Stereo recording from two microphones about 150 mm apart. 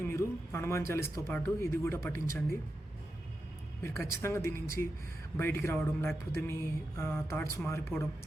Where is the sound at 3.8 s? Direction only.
15° left (ahead or behind).